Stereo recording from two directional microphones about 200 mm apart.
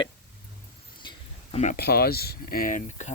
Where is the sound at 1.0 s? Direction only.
20° left (ahead or behind).